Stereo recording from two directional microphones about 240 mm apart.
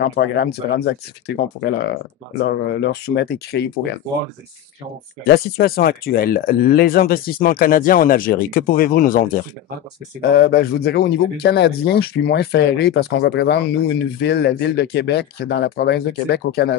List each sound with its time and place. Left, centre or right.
0.0 s speech: left
5.2 s speech: left
10.3 s speech: left